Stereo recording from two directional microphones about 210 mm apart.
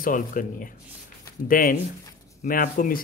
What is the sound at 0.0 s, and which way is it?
Speech, 40° left (ahead or behind).